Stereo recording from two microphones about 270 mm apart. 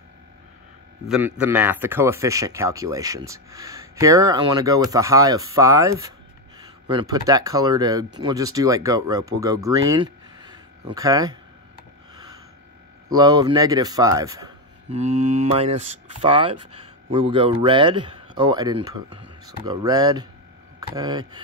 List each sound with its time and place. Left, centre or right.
1.0 s a man's voice: centre
13.1 s speech: centre
14.9 s speech: right